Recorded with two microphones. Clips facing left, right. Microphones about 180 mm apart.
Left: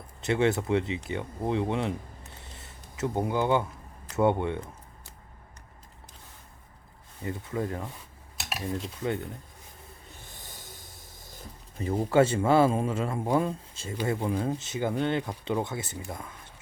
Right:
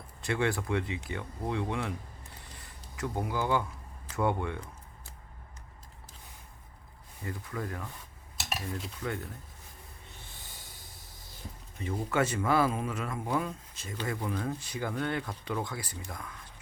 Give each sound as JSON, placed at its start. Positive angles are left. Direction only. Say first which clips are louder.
{"t": 0.2, "sound": "speech", "louder": "left 5 dB", "side_deg": 20}
{"t": 7.3, "sound": "speech", "louder": "left 6 dB", "side_deg": 25}
{"t": 8.4, "sound": "cutlery", "louder": "even", "side_deg": 0}
{"t": 10.8, "sound": "a sound", "louder": "left 3 dB", "side_deg": 45}
{"t": 11.8, "sound": "speech", "louder": "left 7 dB", "side_deg": 35}